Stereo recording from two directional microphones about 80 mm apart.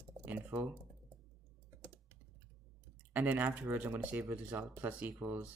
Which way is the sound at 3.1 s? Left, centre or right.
Right.